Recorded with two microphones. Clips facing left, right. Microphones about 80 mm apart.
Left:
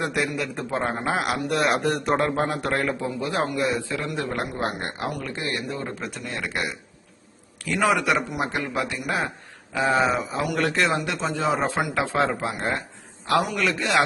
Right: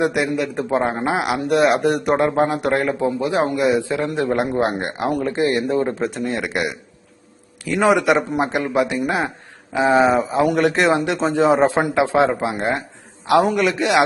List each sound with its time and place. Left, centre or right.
0.1 s a man's voice: centre
1.0 s a man's voice: centre
7.8 s speech: right